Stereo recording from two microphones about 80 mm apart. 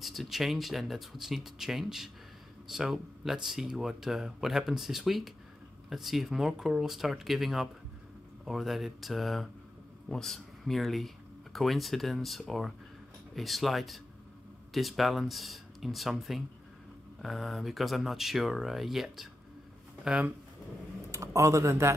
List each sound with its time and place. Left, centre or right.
0.0 s speech: centre
21.1 s speech: right